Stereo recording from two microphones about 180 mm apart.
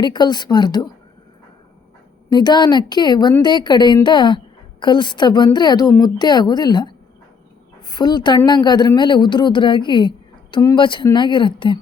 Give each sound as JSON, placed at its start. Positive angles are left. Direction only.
{"t": 0.0, "sound": "speech", "side_deg": 25}
{"t": 2.3, "sound": "speech", "side_deg": 25}